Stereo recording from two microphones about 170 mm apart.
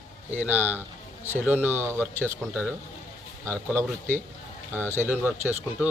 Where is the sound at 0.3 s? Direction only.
10° right (ahead or behind).